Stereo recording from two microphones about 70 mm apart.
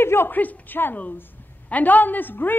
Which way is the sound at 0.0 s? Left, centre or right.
Left.